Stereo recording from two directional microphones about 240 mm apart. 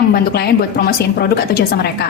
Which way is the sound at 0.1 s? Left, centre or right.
Left.